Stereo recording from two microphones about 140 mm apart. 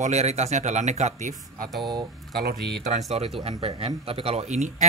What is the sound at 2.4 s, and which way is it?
Speech, 90° right.